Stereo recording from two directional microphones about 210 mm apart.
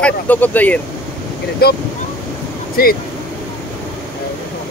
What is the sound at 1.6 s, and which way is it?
Speech, 50° left (ahead or behind).